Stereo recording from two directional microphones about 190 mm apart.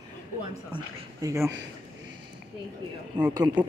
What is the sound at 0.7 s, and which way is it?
Speech, 20° right (ahead or behind).